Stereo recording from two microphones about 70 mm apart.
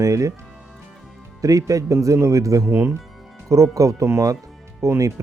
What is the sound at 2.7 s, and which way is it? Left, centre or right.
Speech, right.